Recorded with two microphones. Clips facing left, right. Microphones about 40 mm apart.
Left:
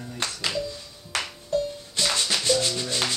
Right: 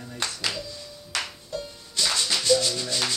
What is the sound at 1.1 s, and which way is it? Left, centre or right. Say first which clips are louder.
Music: left 5 dB; left.